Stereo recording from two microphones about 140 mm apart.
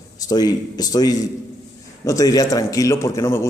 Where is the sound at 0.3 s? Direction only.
30° left (ahead or behind).